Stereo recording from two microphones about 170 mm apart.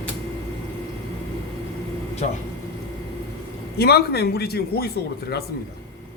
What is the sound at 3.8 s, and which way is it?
A man's voice, 70° left (ahead or behind).